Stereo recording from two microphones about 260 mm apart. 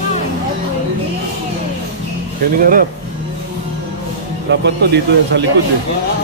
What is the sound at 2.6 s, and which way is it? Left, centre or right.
Speech, right.